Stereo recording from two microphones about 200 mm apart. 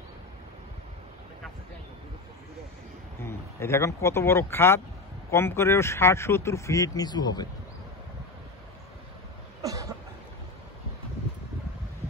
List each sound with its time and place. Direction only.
3.2 s speech: 15° left (ahead or behind)
9.6 s cough: 15° right (ahead or behind)